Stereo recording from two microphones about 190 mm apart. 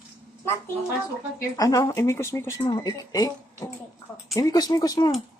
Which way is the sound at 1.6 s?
20° left (ahead or behind).